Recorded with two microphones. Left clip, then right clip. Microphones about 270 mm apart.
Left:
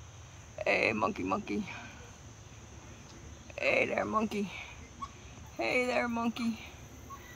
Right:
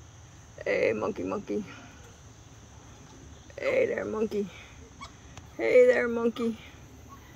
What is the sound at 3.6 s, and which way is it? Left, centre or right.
Speech, centre.